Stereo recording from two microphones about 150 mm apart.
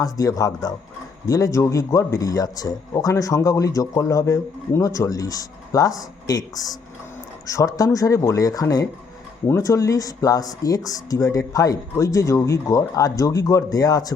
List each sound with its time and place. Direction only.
0.0 s speech: 25° left (ahead or behind)